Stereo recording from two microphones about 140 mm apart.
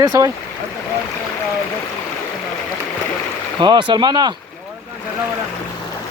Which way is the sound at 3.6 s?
35° right (ahead or behind).